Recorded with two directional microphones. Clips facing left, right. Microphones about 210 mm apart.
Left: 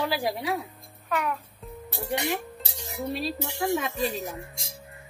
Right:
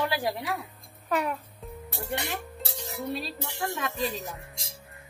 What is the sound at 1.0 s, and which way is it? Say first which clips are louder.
Music: right 1 dB; 30° right (ahead or behind).